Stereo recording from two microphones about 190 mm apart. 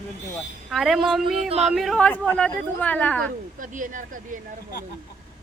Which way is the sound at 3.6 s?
45° right (ahead or behind).